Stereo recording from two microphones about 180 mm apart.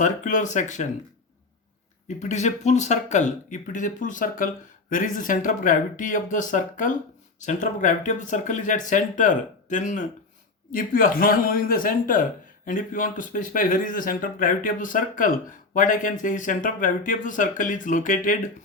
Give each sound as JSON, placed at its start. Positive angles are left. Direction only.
{"t": 0.0, "sound": "speech", "side_deg": 45}
{"t": 2.0, "sound": "speech", "side_deg": 40}